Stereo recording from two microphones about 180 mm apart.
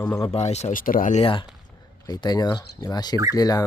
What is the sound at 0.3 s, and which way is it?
Speech, 35° left (ahead or behind).